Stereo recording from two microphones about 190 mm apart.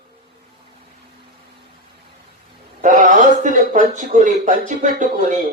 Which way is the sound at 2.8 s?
40° right (ahead or behind).